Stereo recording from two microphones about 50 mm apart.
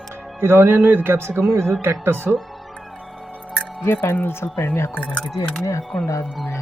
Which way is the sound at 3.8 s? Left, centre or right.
Left.